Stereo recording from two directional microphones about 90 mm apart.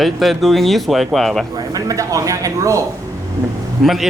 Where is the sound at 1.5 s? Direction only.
40° right (ahead or behind).